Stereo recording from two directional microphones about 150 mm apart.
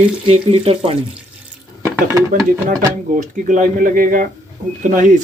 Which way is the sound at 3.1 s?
60° right (ahead or behind).